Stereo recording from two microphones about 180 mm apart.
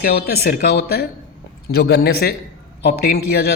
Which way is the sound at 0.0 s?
55° left (ahead or behind).